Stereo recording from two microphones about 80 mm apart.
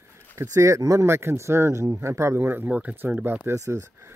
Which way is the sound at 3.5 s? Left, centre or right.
Right.